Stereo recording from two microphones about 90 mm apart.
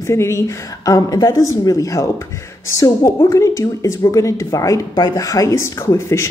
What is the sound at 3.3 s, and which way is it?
Speech, 35° left (ahead or behind).